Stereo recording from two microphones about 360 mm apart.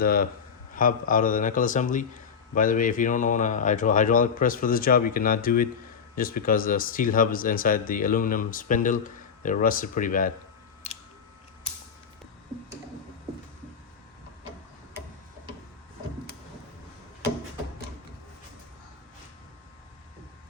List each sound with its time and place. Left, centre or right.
0.0 s speech: left